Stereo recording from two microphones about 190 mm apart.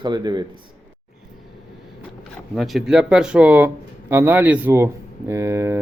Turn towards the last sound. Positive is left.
turn(degrees=-15)  # may be behind; listen again after turning